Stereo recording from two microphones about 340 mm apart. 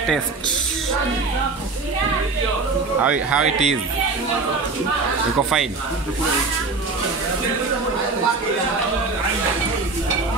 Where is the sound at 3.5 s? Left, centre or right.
Centre.